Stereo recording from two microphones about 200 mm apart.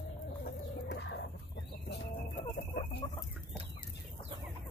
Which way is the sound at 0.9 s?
65° left (ahead or behind).